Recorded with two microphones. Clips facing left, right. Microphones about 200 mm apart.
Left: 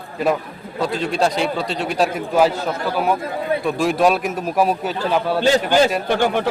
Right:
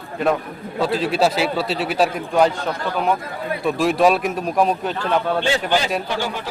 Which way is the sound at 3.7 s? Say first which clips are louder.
Right 2 dB; centre (ahead or behind).